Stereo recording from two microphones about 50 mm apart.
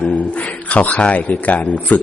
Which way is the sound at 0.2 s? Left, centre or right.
Left.